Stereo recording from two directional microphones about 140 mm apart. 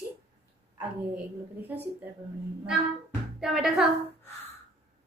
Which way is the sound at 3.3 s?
5° right (ahead or behind).